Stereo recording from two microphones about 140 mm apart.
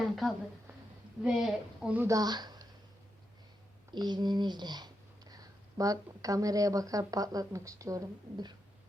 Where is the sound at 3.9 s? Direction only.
30° right (ahead or behind).